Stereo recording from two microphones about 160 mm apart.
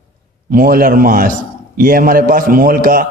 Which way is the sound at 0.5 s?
65° right (ahead or behind).